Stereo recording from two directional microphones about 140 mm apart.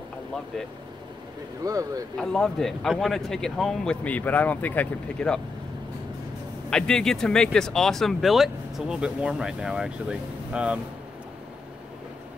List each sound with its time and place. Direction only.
1.6 s speech: 25° right (ahead or behind)
2.1 s speech: 5° left (ahead or behind)
6.7 s speech: 5° left (ahead or behind)